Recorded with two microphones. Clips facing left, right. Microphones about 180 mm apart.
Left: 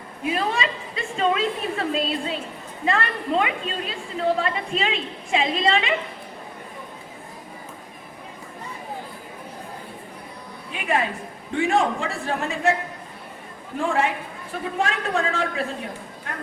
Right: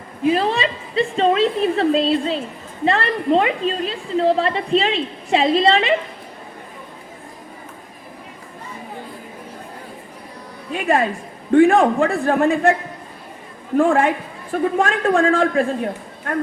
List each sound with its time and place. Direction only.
0.3 s a woman's voice: 30° right (ahead or behind)
10.7 s speech: 45° right (ahead or behind)
11.5 s a man's voice: 55° right (ahead or behind)
13.7 s a man's voice: 50° right (ahead or behind)